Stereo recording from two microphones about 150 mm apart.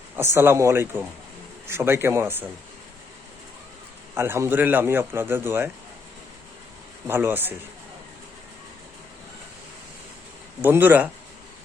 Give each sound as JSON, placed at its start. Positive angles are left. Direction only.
{"t": 0.2, "sound": "a man's voice", "side_deg": -15}
{"t": 4.1, "sound": "a man's voice", "side_deg": -15}
{"t": 7.1, "sound": "a man's voice", "side_deg": -15}
{"t": 10.6, "sound": "a man's voice", "side_deg": -15}